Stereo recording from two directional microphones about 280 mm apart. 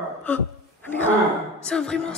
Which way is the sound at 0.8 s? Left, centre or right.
Centre.